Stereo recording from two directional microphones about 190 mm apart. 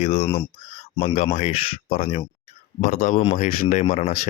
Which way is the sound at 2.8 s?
45° left (ahead or behind).